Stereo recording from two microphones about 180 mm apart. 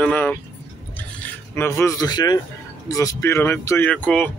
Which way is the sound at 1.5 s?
15° left (ahead or behind).